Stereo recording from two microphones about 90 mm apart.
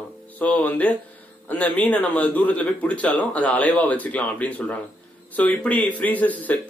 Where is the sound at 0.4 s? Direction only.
15° left (ahead or behind).